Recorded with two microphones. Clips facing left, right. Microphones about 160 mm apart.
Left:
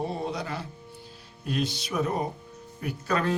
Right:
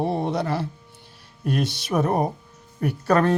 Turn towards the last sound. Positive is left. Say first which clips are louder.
# right 8 dB
turn(degrees=-60)  # may be behind; listen again after turning